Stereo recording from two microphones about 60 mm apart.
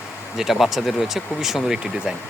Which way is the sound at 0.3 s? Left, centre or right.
Centre.